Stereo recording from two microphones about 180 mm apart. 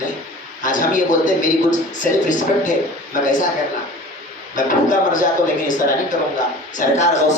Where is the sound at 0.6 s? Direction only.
45° left (ahead or behind).